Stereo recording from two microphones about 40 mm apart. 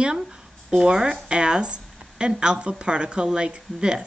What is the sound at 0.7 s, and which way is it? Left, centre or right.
A woman's voice, right.